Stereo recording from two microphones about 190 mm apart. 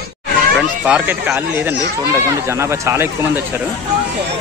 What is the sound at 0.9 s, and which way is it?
Speech, 5° right (ahead or behind).